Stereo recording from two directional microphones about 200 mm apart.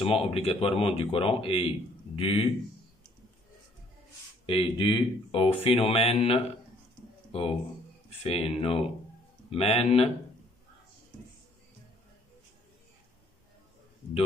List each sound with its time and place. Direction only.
0.0 s speech: 30° left (ahead or behind)
4.5 s speech: 25° left (ahead or behind)
8.2 s speech: 30° left (ahead or behind)